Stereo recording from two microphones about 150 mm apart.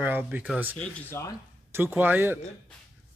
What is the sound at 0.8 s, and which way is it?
Speech, 15° left (ahead or behind).